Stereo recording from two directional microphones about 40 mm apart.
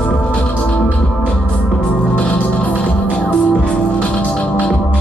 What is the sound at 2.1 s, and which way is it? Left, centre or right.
Music, left.